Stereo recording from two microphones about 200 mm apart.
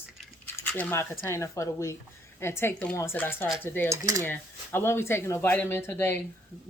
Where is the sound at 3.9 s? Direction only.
15° right (ahead or behind).